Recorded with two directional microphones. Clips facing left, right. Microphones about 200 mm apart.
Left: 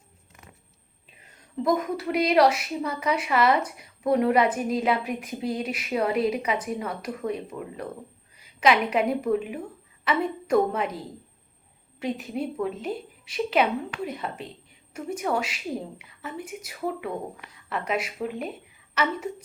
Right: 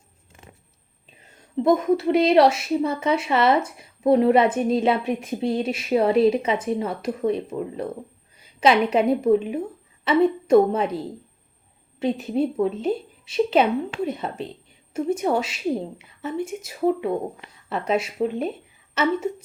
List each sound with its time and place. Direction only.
0.3 s vehicle: 30° right (ahead or behind)
1.6 s a woman's voice: 25° right (ahead or behind)